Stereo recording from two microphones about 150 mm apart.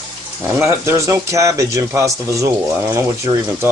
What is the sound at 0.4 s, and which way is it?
Speech, 15° right (ahead or behind).